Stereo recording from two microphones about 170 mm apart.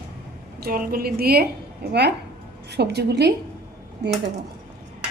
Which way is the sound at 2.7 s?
80° right.